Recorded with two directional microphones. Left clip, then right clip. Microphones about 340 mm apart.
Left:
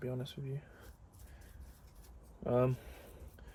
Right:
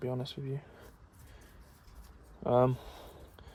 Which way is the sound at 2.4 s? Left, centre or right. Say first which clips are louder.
Right 6 dB; centre.